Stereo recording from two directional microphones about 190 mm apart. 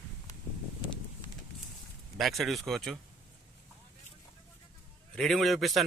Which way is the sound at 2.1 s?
Centre (ahead or behind).